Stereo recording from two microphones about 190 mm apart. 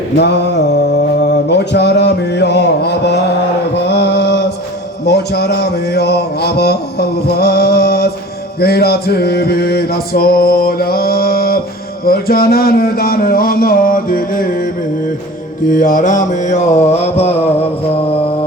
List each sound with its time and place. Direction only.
0.2 s mantra: 60° left (ahead or behind)
8.5 s music: 55° left (ahead or behind)
15.7 s mantra: 45° left (ahead or behind)